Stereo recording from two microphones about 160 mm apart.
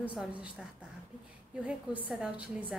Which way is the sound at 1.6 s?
5° right (ahead or behind).